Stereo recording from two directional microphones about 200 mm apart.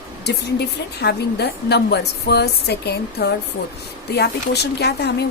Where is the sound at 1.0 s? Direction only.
55° left (ahead or behind).